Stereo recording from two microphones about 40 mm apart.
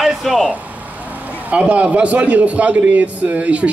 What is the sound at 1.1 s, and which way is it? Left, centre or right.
A man's voice, right.